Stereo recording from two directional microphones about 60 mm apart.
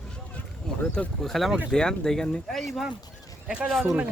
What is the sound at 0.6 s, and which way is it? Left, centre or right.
Speech, centre.